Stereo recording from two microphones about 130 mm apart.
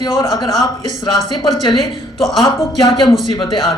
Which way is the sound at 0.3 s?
35° left (ahead or behind).